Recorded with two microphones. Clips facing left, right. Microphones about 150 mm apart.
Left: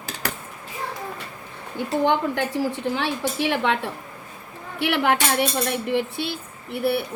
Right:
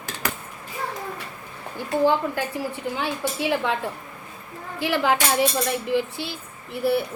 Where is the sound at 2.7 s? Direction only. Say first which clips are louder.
Left 3 dB; 90° left; by 3.8 s 70° left (ahead or behind).